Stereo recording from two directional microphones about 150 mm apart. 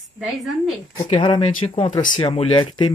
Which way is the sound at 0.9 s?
35° left (ahead or behind).